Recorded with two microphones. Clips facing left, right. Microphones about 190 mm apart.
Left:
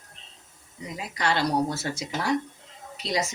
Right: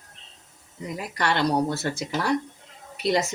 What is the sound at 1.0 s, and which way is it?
Speech, 55° right (ahead or behind).